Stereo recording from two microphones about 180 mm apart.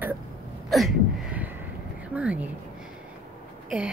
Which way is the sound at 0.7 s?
Centre (ahead or behind).